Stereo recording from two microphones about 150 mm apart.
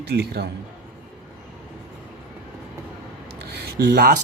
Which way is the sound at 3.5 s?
90° right.